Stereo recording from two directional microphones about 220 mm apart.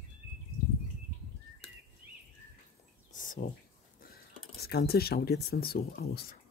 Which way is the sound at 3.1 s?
35° left (ahead or behind).